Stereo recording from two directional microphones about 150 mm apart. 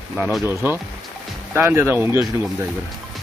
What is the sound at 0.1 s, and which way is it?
Speech, 10° right (ahead or behind).